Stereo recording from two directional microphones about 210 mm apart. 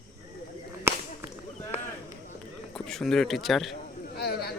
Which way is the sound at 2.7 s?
Centre (ahead or behind).